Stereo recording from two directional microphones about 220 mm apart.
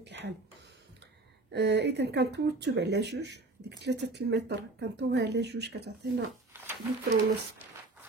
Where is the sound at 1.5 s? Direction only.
50° right (ahead or behind).